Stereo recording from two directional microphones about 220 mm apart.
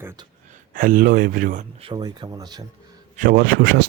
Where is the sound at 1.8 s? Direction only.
20° right (ahead or behind).